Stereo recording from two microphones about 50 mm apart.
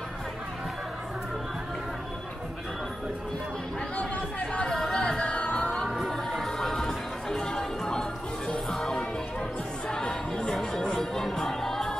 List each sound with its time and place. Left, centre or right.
3.9 s chatter: left
4.7 s music: centre; by 5.8 s left
6.0 s music: centre